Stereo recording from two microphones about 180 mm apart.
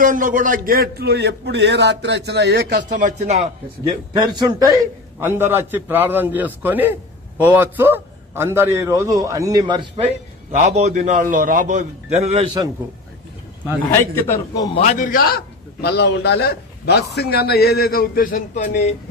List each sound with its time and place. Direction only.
0.0 s a man's voice: 45° right (ahead or behind)
3.8 s a man's voice: 25° right (ahead or behind)
10.7 s a man's voice: 40° right (ahead or behind)
13.9 s a man's voice: 15° left (ahead or behind)
14.8 s a man's voice: 45° left (ahead or behind)